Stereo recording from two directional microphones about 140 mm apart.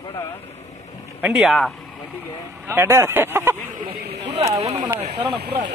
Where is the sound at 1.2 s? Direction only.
5° right (ahead or behind).